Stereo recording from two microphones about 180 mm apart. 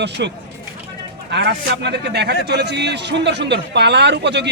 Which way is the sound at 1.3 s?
70° right (ahead or behind).